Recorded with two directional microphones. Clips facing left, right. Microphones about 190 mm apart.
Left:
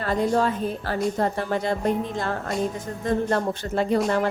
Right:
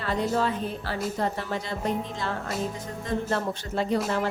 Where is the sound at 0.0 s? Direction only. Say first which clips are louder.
Left 4 dB; 45° left (ahead or behind).